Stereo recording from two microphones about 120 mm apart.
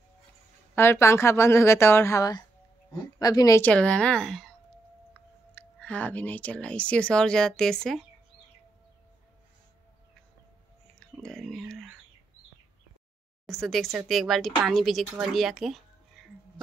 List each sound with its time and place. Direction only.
0.7 s speech: 20° left (ahead or behind)
3.6 s speech: 10° left (ahead or behind)
5.5 s speech: 15° left (ahead or behind)
11.0 s a sound: 5° left (ahead or behind)
13.5 s speech: centre (ahead or behind)